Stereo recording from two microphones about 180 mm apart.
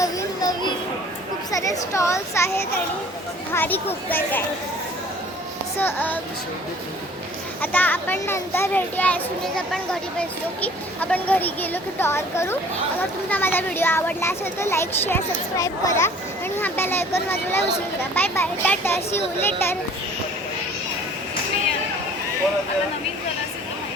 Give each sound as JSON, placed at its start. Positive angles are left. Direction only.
{"t": 0.0, "sound": "children playing", "side_deg": 20}
{"t": 1.5, "sound": "a child's voice", "side_deg": 20}
{"t": 5.8, "sound": "a child's voice", "side_deg": 10}
{"t": 7.6, "sound": "a child's voice", "side_deg": 10}
{"t": 16.6, "sound": "a sound", "side_deg": 10}
{"t": 17.2, "sound": "a child's voice", "side_deg": 10}